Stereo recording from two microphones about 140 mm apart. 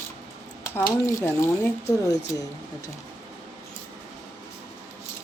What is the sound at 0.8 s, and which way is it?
Speech, 25° left (ahead or behind).